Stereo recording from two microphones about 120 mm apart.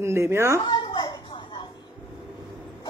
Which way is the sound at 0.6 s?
40° left (ahead or behind).